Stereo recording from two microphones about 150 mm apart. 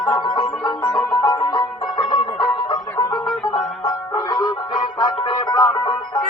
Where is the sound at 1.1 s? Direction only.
30° left (ahead or behind).